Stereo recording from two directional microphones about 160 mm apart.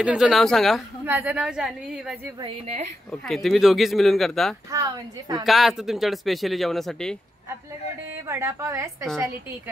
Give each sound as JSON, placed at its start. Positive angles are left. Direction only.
{"t": 0.0, "sound": "speech", "side_deg": -5}
{"t": 1.0, "sound": "a woman's voice", "side_deg": -10}
{"t": 2.4, "sound": "a woman's voice", "side_deg": -40}
{"t": 3.1, "sound": "speech", "side_deg": 0}
{"t": 4.6, "sound": "a woman's voice", "side_deg": -20}
{"t": 5.4, "sound": "speech", "side_deg": 0}
{"t": 8.3, "sound": "a woman's voice", "side_deg": -15}